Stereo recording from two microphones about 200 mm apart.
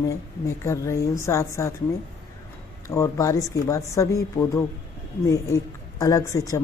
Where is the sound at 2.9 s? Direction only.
15° left (ahead or behind).